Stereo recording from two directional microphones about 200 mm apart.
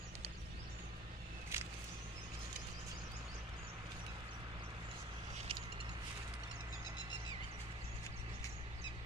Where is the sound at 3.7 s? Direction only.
25° right (ahead or behind).